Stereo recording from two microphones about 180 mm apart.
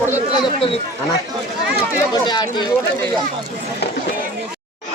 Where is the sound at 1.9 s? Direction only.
20° left (ahead or behind).